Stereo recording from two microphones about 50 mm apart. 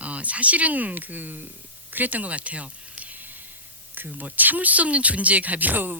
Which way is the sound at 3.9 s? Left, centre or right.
Right.